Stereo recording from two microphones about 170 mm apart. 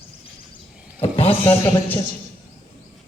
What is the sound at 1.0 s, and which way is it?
A man's voice, 35° left (ahead or behind).